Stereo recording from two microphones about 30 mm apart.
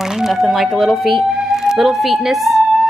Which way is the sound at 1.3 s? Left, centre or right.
Centre.